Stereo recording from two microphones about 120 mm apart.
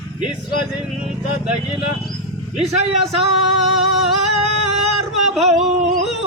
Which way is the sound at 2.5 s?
60° right (ahead or behind).